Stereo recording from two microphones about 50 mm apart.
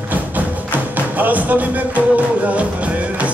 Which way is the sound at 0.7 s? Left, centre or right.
Right.